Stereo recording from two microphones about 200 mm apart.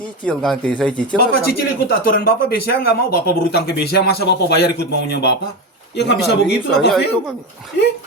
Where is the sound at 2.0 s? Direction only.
50° left (ahead or behind).